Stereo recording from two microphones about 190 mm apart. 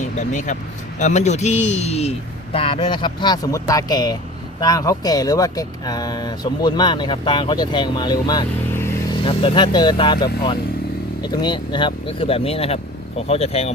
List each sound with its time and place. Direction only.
0.2 s speech: 40° left (ahead or behind); by 9.1 s 15° left (ahead or behind)
9.1 s speech: 30° left (ahead or behind)
11.2 s speech: 20° left (ahead or behind)